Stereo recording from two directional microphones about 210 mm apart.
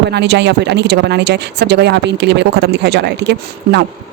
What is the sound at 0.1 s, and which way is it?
Speech, 55° right (ahead or behind).